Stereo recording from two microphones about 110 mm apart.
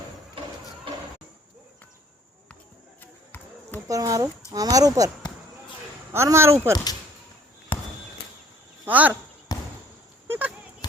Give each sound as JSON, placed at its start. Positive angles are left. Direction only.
{"t": 3.0, "sound": "basketball bounce", "side_deg": 20}
{"t": 3.8, "sound": "speech", "side_deg": -30}
{"t": 6.1, "sound": "speech", "side_deg": -25}
{"t": 8.8, "sound": "speech", "side_deg": -15}
{"t": 9.5, "sound": "basketball bounce", "side_deg": 35}
{"t": 10.2, "sound": "a sound", "side_deg": -15}